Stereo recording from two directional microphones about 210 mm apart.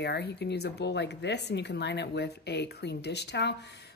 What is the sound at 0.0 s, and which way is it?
Speech, 50° left (ahead or behind).